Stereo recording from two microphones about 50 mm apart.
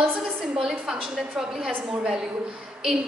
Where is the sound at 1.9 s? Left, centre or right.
Centre.